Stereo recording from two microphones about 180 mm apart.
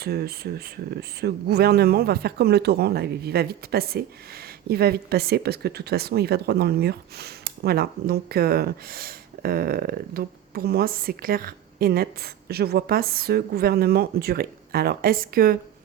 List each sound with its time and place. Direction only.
0.0 s speech: 60° right (ahead or behind)